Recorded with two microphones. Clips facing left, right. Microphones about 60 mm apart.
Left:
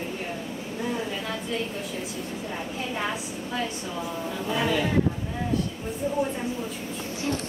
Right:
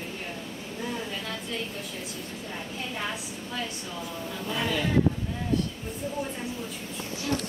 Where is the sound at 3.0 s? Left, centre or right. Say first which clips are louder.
Left 4 dB; centre.